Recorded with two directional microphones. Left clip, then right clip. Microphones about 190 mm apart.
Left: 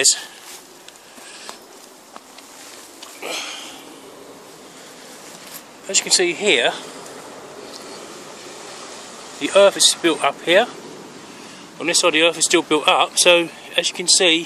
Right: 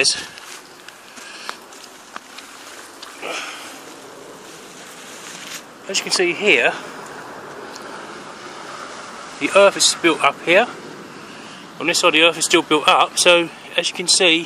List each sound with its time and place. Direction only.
3.2 s a sound: 15° left (ahead or behind)
5.9 s speech: 15° left (ahead or behind)
9.4 s speech: 10° left (ahead or behind)
11.8 s speech: 10° left (ahead or behind)